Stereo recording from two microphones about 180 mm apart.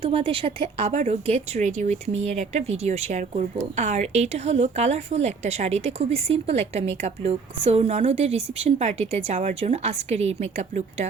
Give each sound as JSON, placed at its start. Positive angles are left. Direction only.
{"t": 0.0, "sound": "a woman's voice", "side_deg": -30}